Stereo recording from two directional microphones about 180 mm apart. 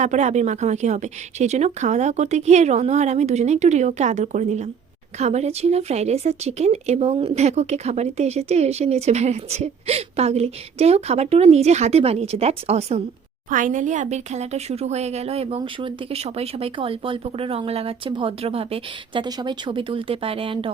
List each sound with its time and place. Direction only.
0.0 s speech: 40° right (ahead or behind)
13.5 s speech: 45° right (ahead or behind); by 20.7 s 30° right (ahead or behind)